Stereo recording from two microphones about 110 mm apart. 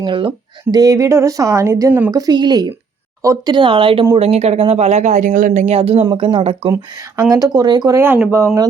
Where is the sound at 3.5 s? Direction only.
50° right (ahead or behind).